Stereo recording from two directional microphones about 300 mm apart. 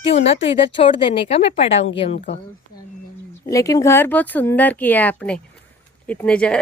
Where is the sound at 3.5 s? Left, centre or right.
Centre.